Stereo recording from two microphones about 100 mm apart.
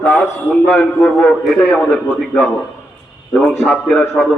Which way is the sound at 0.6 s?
10° left (ahead or behind).